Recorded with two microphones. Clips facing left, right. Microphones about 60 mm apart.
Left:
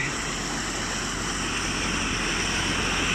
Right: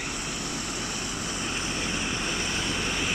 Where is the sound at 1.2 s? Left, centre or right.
Left.